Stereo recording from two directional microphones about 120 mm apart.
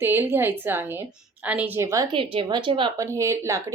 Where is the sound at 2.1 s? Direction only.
45° right (ahead or behind).